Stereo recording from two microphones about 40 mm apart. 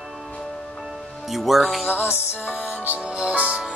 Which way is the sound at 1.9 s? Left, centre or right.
Left.